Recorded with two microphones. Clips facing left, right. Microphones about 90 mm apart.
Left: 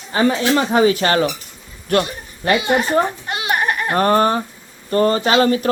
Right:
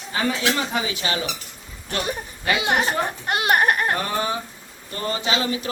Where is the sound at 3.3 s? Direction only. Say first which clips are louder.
Right 1 dB; 55° right (ahead or behind).